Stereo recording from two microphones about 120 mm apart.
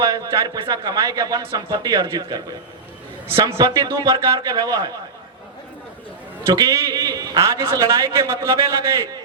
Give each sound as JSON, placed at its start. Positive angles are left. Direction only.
{"t": 0.0, "sound": "a man's voice", "side_deg": -30}
{"t": 6.4, "sound": "a man's voice", "side_deg": -30}